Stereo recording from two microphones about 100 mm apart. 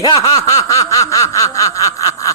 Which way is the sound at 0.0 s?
40° left (ahead or behind).